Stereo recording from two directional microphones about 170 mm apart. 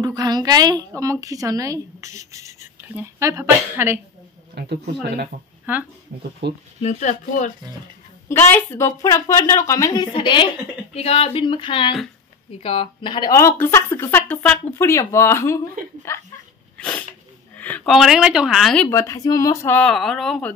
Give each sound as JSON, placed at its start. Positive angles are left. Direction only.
{"t": 0.0, "sound": "a woman's voice", "side_deg": -25}
{"t": 4.6, "sound": "speech", "side_deg": -75}
{"t": 6.4, "sound": "speech", "side_deg": -90}
{"t": 6.8, "sound": "speech", "side_deg": 45}
{"t": 8.3, "sound": "a woman's voice", "side_deg": 15}
{"t": 11.0, "sound": "a sound", "side_deg": 35}
{"t": 12.6, "sound": "speech", "side_deg": 35}
{"t": 16.7, "sound": "a sound", "side_deg": 10}
{"t": 17.6, "sound": "a woman's voice", "side_deg": 10}
{"t": 18.9, "sound": "speech", "side_deg": 15}